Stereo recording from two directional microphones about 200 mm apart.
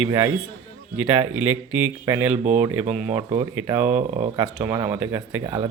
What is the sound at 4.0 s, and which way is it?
Speech, 35° right (ahead or behind).